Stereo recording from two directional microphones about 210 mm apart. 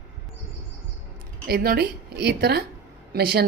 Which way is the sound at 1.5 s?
50° right (ahead or behind).